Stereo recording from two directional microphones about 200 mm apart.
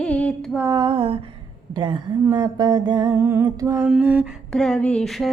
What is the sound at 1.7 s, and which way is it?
Mantra, 25° right (ahead or behind).